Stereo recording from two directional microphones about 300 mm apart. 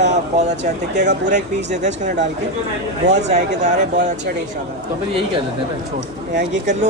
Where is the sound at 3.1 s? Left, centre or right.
Right.